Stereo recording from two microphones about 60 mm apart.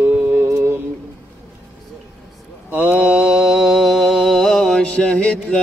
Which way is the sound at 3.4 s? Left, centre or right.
Centre.